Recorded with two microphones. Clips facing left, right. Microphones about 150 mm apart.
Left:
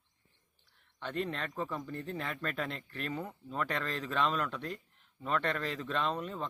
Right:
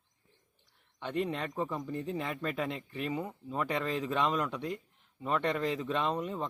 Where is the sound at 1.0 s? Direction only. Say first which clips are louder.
Right 3 dB; 15° right (ahead or behind).